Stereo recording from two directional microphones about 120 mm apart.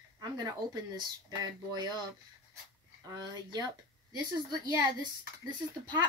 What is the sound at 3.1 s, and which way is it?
Speech, 35° right (ahead or behind).